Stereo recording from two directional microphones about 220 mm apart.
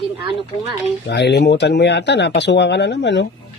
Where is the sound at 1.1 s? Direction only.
50° left (ahead or behind).